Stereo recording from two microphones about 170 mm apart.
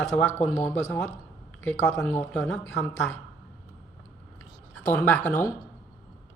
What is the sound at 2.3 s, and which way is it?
Speech, 5° left (ahead or behind).